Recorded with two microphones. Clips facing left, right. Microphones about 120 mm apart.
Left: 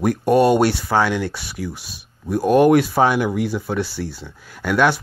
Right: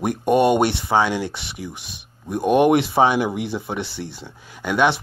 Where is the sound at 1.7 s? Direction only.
60° right (ahead or behind).